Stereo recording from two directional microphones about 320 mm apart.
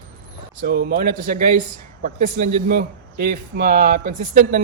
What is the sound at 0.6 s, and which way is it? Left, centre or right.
Speech, right.